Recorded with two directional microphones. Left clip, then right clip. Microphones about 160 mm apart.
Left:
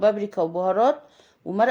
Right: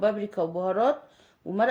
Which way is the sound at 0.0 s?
35° left (ahead or behind).